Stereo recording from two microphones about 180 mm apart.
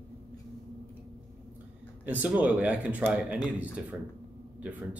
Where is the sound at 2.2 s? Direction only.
10° right (ahead or behind).